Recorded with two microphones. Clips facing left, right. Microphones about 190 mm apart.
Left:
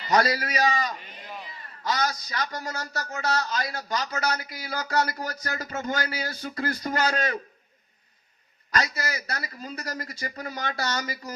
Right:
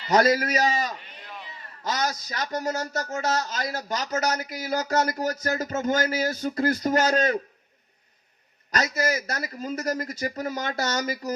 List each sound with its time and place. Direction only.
0.1 s speech: 45° right (ahead or behind)
8.8 s speech: 45° right (ahead or behind)